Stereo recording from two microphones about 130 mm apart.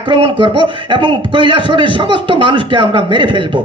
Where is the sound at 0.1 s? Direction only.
40° right (ahead or behind).